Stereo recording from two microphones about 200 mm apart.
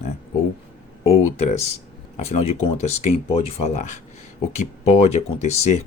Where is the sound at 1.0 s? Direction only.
30° left (ahead or behind).